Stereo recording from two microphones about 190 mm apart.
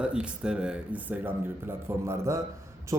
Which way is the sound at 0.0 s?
5° right (ahead or behind).